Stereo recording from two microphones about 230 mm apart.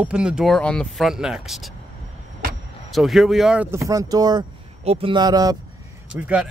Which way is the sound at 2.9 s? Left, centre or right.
Centre.